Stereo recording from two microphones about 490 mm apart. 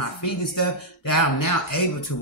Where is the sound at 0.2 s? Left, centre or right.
Left.